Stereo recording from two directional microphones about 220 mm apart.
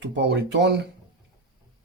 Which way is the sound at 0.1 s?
50° right (ahead or behind).